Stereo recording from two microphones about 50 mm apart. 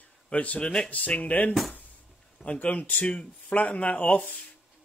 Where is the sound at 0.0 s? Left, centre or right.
Left.